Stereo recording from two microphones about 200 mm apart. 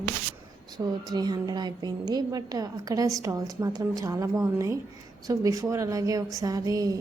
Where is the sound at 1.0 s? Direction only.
20° right (ahead or behind).